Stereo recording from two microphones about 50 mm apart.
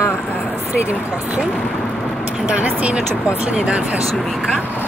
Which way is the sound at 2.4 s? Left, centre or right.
Right.